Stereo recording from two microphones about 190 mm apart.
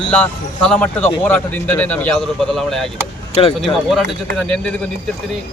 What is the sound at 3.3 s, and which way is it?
Speech, 30° left (ahead or behind).